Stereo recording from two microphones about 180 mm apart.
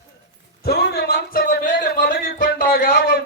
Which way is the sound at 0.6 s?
60° left (ahead or behind).